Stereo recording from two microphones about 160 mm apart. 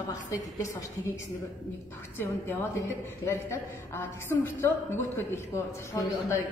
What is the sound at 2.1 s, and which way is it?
A woman's voice, 15° left (ahead or behind).